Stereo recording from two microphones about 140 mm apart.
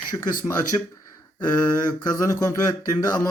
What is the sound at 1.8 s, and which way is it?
Speech, 30° left (ahead or behind).